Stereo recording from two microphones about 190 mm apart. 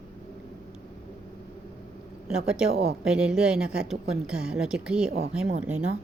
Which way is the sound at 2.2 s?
5° right (ahead or behind).